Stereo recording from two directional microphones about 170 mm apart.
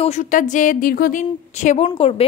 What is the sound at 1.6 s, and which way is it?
Speech, 40° left (ahead or behind).